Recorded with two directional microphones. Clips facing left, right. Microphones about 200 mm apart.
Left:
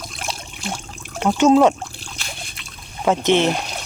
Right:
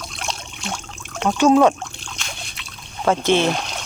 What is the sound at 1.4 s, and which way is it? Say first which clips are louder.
Speech: left 1 dB; 20° left (ahead or behind).